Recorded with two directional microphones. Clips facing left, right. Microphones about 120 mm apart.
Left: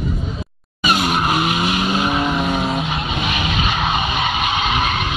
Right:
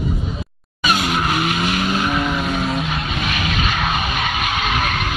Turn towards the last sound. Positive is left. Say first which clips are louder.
# left 2 dB
turn(degrees=15)  # may be behind; listen again after turning